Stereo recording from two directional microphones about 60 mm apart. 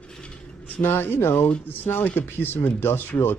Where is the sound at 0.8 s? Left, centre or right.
Left.